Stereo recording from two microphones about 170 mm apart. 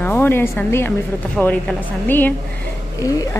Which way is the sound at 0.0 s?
15° left (ahead or behind).